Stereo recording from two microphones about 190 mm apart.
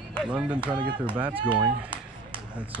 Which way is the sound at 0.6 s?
25° right (ahead or behind).